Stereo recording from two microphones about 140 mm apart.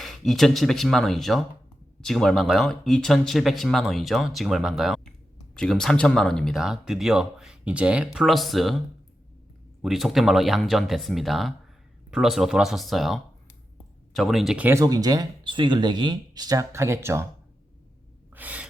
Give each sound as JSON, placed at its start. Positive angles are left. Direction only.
{"t": 0.0, "sound": "speech", "side_deg": 0}
{"t": 9.8, "sound": "speech", "side_deg": 0}
{"t": 14.8, "sound": "speech", "side_deg": -25}
{"t": 18.3, "sound": "gasp", "side_deg": -10}